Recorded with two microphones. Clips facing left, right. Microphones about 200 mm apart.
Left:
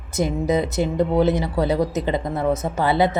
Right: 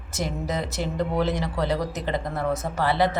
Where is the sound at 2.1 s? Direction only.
20° left (ahead or behind).